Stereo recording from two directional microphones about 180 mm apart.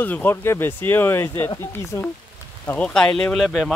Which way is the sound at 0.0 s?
10° left (ahead or behind).